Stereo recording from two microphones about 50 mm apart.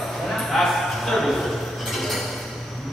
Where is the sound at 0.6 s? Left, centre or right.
Centre.